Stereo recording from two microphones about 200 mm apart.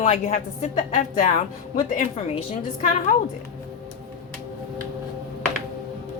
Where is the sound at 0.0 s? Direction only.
35° left (ahead or behind).